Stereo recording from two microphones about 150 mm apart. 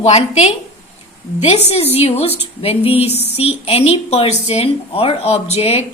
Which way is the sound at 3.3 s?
40° left (ahead or behind).